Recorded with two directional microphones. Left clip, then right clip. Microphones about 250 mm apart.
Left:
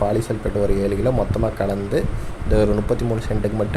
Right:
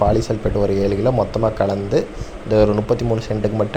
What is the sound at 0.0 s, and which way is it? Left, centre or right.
Speech, centre.